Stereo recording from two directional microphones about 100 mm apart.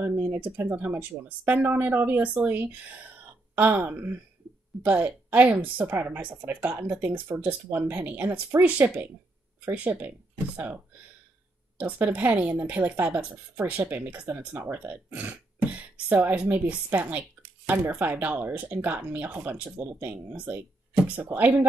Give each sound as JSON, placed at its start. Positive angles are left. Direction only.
{"t": 0.0, "sound": "a woman's voice", "side_deg": -20}
{"t": 11.8, "sound": "a woman's voice", "side_deg": -15}